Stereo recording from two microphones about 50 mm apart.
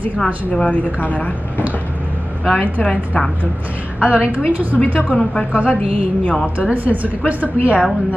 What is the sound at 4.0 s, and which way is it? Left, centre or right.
Speech, right.